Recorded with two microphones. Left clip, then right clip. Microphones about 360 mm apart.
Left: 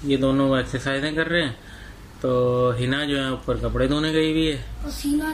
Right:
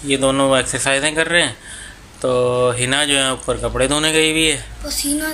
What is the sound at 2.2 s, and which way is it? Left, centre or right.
Speech, right.